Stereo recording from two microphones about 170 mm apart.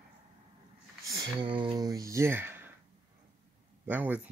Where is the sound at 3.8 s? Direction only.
10° right (ahead or behind).